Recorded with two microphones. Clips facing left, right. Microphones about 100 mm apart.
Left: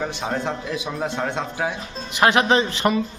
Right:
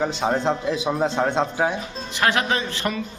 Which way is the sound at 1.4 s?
25° right (ahead or behind).